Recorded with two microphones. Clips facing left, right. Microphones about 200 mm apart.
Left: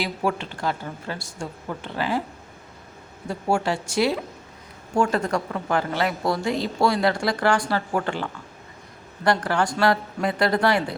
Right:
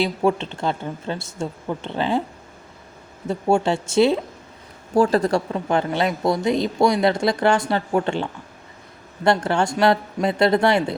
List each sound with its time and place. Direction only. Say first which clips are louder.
0.0 s speech: right 6 dB; 25° right (ahead or behind)
3.2 s speech: right 4 dB; 25° right (ahead or behind)
4.9 s a woman's voice: right 5 dB; 35° right (ahead or behind)
5.5 s speech: right 3 dB; 20° right (ahead or behind)